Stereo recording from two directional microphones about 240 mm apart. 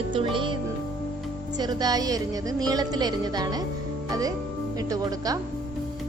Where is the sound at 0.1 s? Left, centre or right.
Right.